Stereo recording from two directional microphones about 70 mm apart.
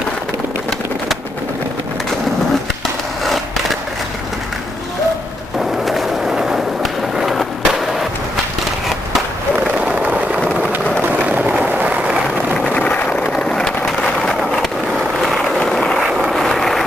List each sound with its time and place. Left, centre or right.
5.6 s skateboard: centre
9.6 s vehicle: centre
10.7 s a sound: right
11.2 s vehicle: right
12.7 s vehicle: centre
13.4 s a sound: centre
15.2 s vehicle: centre